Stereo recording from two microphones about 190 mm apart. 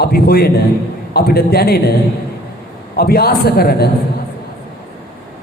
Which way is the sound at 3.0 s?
55° left (ahead or behind).